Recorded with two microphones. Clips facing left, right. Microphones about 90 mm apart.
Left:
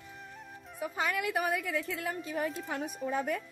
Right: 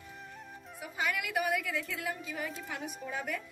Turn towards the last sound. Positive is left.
turn(degrees=35)  # may be behind; listen again after turning